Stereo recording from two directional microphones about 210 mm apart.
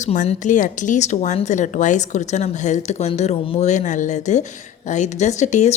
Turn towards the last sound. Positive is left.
turn(degrees=35)  # may be behind; listen again after turning